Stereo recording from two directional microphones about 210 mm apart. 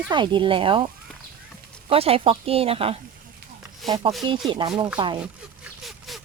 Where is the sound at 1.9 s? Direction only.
25° right (ahead or behind).